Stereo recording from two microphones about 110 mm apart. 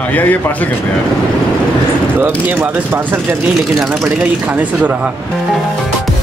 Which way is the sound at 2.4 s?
15° right (ahead or behind).